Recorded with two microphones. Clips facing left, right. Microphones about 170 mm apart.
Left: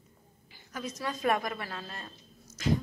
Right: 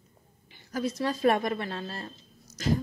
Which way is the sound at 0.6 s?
35° right (ahead or behind).